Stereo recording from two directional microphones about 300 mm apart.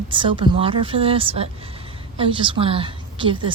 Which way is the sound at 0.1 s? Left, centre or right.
Centre.